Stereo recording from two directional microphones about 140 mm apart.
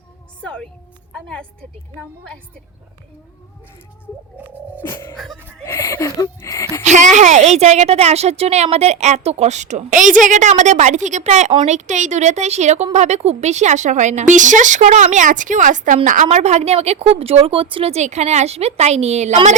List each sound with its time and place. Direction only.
0.4 s a woman's voice: 5° left (ahead or behind)
4.8 s music: 15° left (ahead or behind)
5.1 s a woman's voice: centre (ahead or behind)
5.6 s a sound: 20° left (ahead or behind)
6.8 s a woman's voice: 60° right (ahead or behind)